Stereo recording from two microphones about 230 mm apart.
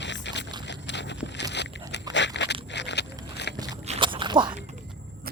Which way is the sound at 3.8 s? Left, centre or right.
Right.